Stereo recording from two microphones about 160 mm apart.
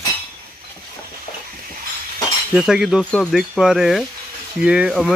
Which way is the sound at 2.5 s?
5° right (ahead or behind).